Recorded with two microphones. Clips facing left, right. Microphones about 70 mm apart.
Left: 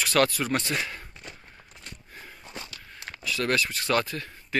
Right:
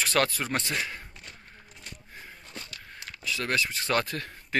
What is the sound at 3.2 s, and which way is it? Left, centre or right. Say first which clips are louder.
Speech: left 3 dB; centre.